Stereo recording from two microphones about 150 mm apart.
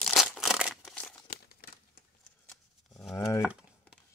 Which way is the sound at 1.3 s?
80° left.